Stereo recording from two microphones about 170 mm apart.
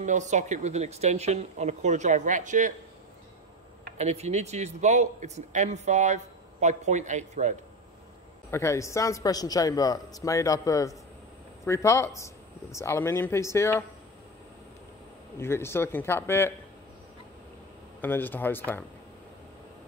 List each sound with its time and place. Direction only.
0.0 s speech: 45° right (ahead or behind)
4.0 s speech: 40° right (ahead or behind)
8.5 s a man's voice: 15° left (ahead or behind)
15.3 s a man's voice: 15° left (ahead or behind)
18.0 s a man's voice: 10° left (ahead or behind)